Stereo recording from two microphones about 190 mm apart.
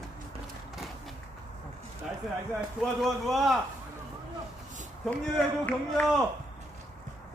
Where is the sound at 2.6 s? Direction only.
Centre (ahead or behind).